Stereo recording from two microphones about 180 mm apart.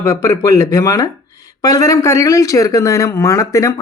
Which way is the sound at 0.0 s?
15° left (ahead or behind).